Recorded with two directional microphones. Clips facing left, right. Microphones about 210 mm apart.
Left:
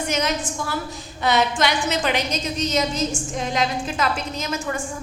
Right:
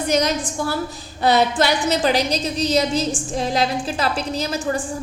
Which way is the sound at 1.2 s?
35° right (ahead or behind).